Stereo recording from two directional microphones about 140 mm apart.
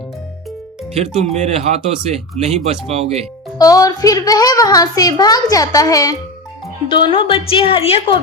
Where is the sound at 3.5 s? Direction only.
25° left (ahead or behind).